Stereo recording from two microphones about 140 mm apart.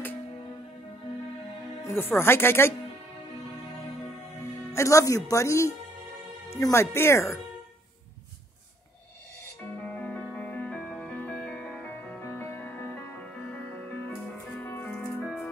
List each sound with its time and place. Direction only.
1.8 s speech: 15° left (ahead or behind)
4.7 s speech: 20° left (ahead or behind)
9.8 s music: 10° left (ahead or behind)